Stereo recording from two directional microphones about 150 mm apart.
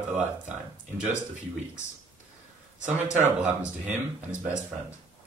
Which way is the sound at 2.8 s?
10° right (ahead or behind).